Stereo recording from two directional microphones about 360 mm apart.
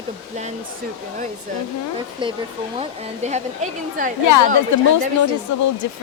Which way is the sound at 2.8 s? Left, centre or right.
Centre.